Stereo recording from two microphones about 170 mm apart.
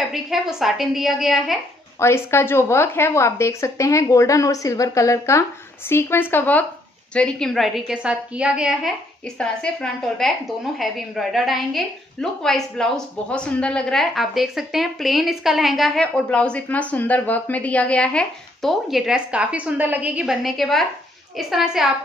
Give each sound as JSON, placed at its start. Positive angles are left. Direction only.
{"t": 0.1, "sound": "a woman's voice", "side_deg": 0}
{"t": 2.0, "sound": "a woman's voice", "side_deg": 15}